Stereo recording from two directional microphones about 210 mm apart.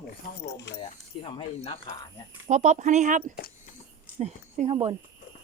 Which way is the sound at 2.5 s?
35° right (ahead or behind).